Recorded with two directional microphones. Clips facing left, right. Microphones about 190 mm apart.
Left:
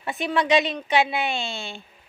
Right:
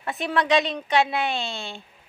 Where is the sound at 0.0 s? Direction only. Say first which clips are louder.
Left 1 dB; centre (ahead or behind).